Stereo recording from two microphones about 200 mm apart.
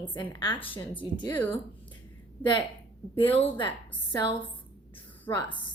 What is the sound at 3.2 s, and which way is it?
Speech, 10° left (ahead or behind).